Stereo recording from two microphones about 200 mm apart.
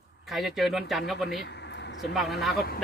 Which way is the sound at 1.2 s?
60° left (ahead or behind).